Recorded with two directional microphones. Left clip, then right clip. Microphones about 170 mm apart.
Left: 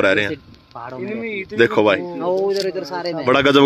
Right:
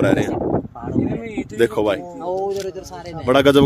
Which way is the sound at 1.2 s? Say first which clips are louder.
Left 2 dB; 45° left (ahead or behind).